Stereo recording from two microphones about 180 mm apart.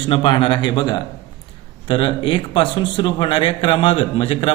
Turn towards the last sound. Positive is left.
turn(degrees=30)  # may be behind; listen again after turning